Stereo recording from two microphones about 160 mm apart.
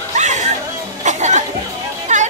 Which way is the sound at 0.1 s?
45° right (ahead or behind).